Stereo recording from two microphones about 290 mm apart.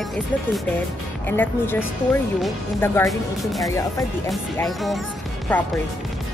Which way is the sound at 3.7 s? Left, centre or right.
Centre.